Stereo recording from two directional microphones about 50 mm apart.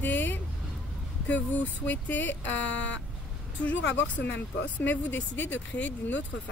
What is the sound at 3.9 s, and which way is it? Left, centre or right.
Speech, left.